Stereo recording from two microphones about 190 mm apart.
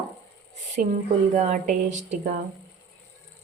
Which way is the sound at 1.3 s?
40° right (ahead or behind).